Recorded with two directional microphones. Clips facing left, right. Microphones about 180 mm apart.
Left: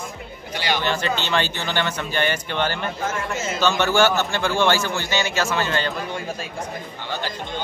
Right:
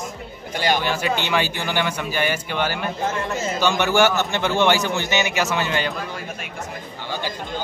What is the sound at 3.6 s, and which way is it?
A man's voice, 15° right (ahead or behind).